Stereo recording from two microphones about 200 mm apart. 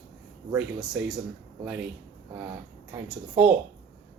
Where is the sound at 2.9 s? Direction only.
10° right (ahead or behind).